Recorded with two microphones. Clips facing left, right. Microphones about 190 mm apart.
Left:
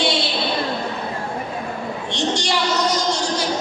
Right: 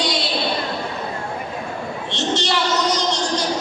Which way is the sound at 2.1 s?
15° left (ahead or behind).